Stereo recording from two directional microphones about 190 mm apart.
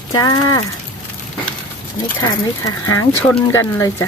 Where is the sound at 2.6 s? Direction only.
15° left (ahead or behind).